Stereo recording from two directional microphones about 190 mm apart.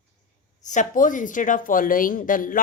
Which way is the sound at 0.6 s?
40° left (ahead or behind).